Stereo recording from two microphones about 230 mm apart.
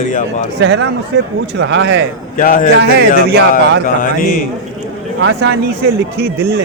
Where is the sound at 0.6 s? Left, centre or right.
Right.